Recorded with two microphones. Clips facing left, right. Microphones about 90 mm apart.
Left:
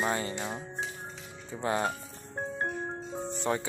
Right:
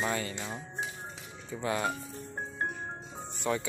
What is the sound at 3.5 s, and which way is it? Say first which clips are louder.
Speech: even; 35° left (ahead or behind).